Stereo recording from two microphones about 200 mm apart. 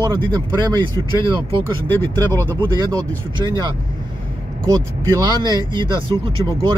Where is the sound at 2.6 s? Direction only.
20° right (ahead or behind).